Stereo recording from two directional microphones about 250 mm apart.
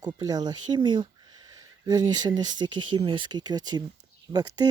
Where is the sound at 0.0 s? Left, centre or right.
Centre.